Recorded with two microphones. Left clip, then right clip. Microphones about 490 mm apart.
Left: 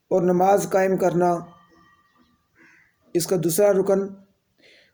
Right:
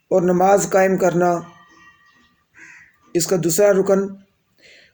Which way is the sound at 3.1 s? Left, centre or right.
Left.